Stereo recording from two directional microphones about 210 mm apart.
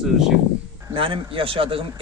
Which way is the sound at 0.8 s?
25° right (ahead or behind).